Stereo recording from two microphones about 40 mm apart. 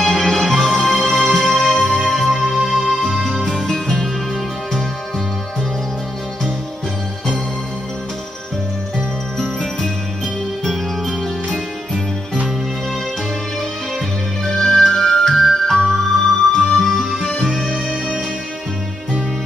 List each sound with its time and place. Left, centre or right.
0.0 s music: centre
3.4 s music: centre
10.6 s music: centre
14.5 s music: centre
17.8 s music: centre